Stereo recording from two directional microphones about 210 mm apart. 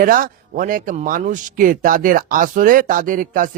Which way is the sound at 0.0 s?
40° right (ahead or behind).